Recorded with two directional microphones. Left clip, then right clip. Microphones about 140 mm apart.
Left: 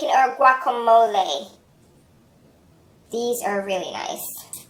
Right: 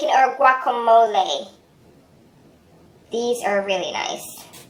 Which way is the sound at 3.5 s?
30° left (ahead or behind).